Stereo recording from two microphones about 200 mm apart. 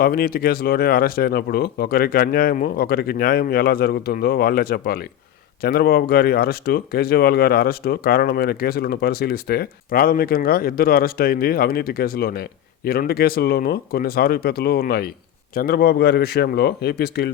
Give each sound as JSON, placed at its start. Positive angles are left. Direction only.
{"t": 0.0, "sound": "speech", "side_deg": 45}